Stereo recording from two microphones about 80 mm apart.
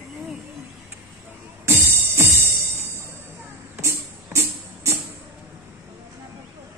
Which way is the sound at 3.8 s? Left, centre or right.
Right.